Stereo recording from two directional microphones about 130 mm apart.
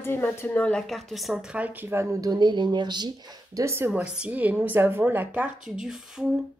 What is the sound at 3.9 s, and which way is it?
A woman's voice, 5° right (ahead or behind).